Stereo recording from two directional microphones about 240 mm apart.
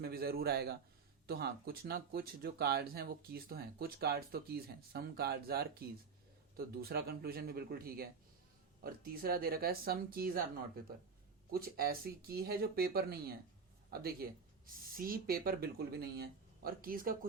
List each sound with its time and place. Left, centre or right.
0.0 s a man's voice: right
11.5 s speech: right